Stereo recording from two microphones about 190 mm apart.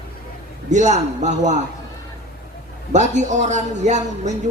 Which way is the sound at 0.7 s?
40° right (ahead or behind).